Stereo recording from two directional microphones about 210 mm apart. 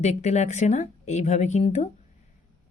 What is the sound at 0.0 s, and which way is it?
A woman's voice, 35° left (ahead or behind).